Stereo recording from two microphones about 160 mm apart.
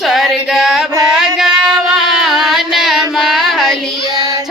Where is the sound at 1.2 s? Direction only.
Centre (ahead or behind).